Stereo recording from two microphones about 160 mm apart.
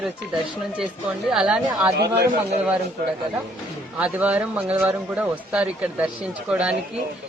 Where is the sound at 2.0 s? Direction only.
90° right.